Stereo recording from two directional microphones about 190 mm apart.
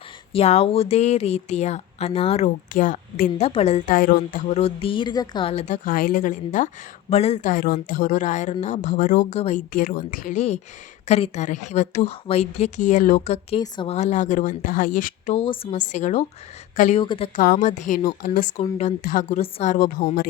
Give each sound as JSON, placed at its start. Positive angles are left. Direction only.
{"t": 0.3, "sound": "speech", "side_deg": 35}
{"t": 7.5, "sound": "speech", "side_deg": 50}
{"t": 13.6, "sound": "a woman's voice", "side_deg": 25}
{"t": 13.9, "sound": "speech", "side_deg": 40}
{"t": 15.4, "sound": "speech", "side_deg": 30}
{"t": 17.0, "sound": "a woman's voice", "side_deg": 25}
{"t": 17.3, "sound": "speech", "side_deg": 45}